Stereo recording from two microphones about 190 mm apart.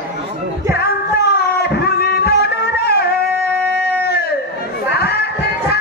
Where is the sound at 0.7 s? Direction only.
60° left (ahead or behind).